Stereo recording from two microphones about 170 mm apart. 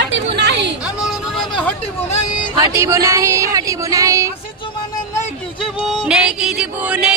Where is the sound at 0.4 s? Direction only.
85° right.